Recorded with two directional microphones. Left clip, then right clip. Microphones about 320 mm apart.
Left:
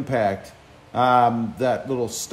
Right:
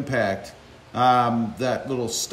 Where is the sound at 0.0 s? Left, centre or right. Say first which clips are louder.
Left 2 dB; centre.